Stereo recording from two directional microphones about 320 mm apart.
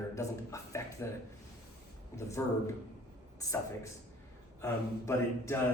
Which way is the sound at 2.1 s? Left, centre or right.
Centre.